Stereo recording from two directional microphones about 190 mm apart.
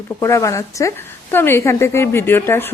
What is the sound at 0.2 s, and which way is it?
A woman's voice, 15° left (ahead or behind).